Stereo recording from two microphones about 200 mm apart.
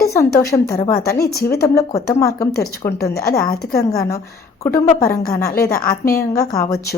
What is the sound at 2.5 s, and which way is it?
Speech, 50° left (ahead or behind).